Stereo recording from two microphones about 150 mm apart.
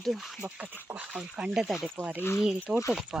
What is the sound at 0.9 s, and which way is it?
Wheeze, 10° right (ahead or behind).